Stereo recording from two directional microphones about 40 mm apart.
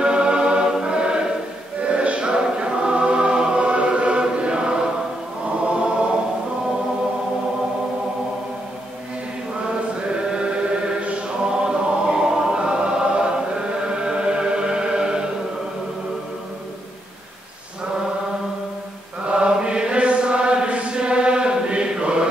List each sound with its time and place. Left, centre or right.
0.0 s choir: right
11.4 s choir: right
13.8 s chant: right
19.3 s chant: right